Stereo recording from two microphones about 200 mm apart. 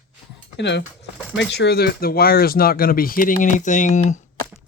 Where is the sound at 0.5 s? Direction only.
60° left (ahead or behind); by 4.3 s 35° left (ahead or behind).